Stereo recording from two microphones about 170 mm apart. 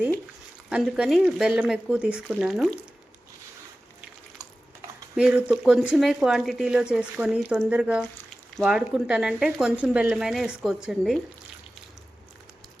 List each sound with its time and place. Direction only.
0.7 s speech: 5° right (ahead or behind)
5.1 s speech: 5° right (ahead or behind)